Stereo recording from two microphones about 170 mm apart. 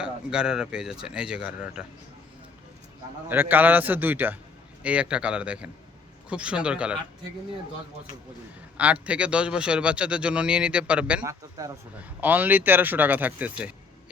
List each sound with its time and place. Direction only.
0.0 s a man's voice: 5° right (ahead or behind)
3.2 s a man's voice: 10° right (ahead or behind)
8.8 s a man's voice: 10° right (ahead or behind)
11.2 s a man's voice: 20° right (ahead or behind)